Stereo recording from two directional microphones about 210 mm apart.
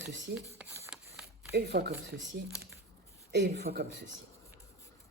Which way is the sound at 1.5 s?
50° right (ahead or behind).